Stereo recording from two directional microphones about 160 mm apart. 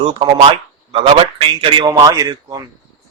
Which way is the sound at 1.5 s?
30° right (ahead or behind).